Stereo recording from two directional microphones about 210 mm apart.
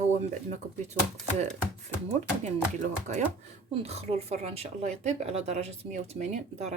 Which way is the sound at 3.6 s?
30° right (ahead or behind).